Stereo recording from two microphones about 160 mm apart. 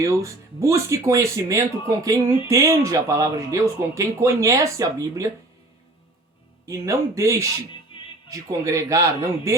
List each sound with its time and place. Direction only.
0.0 s speech: 20° right (ahead or behind)
6.7 s speech: 20° right (ahead or behind)
7.9 s music: 35° left (ahead or behind)
8.3 s speech: 20° right (ahead or behind)